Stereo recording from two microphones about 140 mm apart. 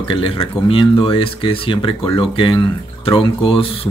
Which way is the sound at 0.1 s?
40° left (ahead or behind).